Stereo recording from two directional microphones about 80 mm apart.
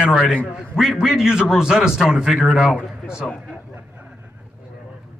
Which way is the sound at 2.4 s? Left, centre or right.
Centre.